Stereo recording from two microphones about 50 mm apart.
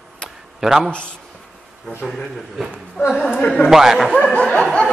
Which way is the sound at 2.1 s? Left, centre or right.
Centre.